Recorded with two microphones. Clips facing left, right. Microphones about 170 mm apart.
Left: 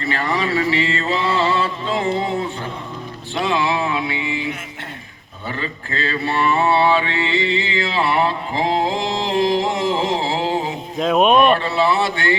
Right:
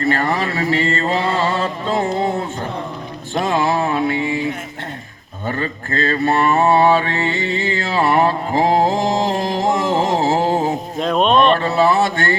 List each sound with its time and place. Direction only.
0.0 s mantra: 45° right (ahead or behind)
3.3 s a sound: 45° right (ahead or behind)
5.5 s mantra: 45° right (ahead or behind)
10.9 s speech: 5° left (ahead or behind)
11.6 s mantra: 45° right (ahead or behind)